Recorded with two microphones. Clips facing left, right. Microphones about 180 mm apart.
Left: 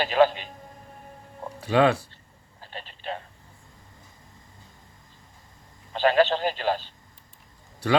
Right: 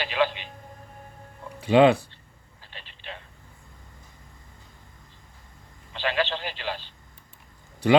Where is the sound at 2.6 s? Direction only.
45° left (ahead or behind).